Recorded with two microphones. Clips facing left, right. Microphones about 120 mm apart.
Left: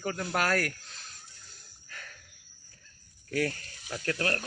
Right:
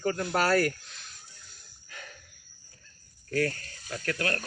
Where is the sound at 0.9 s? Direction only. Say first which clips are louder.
Even; 35° left (ahead or behind).